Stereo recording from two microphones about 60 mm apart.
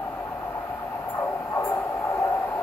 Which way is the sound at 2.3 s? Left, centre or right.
Left.